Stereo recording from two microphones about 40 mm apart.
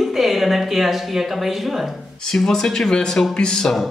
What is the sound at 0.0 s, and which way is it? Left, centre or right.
Speech, centre.